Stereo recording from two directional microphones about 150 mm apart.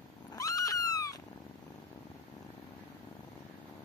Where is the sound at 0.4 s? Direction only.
20° left (ahead or behind).